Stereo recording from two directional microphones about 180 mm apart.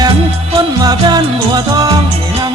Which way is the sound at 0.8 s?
20° right (ahead or behind).